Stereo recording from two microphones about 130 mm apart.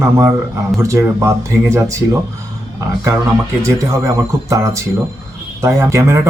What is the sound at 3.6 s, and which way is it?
Speech, 25° right (ahead or behind).